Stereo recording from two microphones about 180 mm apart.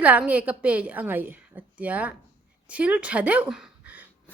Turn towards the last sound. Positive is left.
turn(degrees=-10)  # may be behind; listen again after turning